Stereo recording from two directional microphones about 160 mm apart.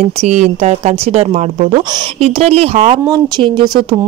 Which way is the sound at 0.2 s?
45° right (ahead or behind).